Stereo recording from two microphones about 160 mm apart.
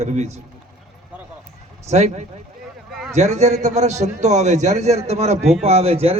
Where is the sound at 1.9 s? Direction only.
45° right (ahead or behind).